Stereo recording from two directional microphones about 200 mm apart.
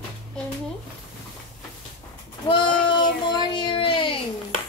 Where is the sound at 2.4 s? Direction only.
25° left (ahead or behind).